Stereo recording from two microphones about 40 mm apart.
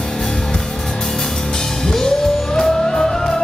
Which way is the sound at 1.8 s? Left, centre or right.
Centre.